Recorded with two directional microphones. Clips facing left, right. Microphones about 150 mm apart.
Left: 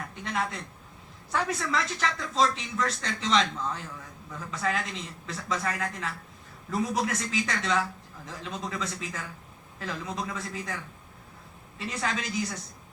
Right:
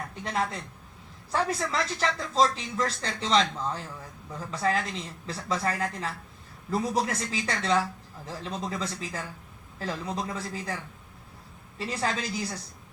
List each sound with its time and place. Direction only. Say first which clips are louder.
0.3 s speech: right 2 dB; 35° right (ahead or behind)
11.8 s speech: right 2 dB; 35° right (ahead or behind)